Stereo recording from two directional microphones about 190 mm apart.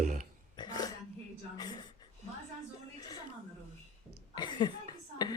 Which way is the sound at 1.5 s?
20° left (ahead or behind).